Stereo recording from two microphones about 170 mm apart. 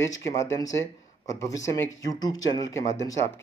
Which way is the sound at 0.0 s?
20° left (ahead or behind).